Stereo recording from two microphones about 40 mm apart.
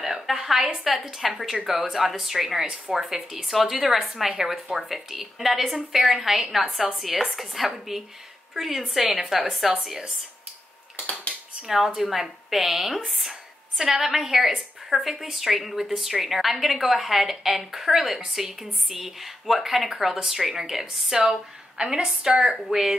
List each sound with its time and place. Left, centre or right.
0.0 s a woman's voice: centre
7.0 s a woman's voice: centre
11.6 s a woman's voice: centre
21.2 s a woman's voice: right